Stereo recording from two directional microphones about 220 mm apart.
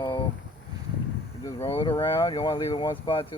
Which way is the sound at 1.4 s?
15° left (ahead or behind).